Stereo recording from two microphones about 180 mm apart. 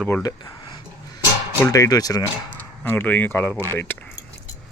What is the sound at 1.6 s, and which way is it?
Speech, 20° left (ahead or behind).